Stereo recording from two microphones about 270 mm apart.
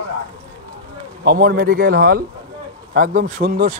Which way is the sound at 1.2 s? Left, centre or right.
Right.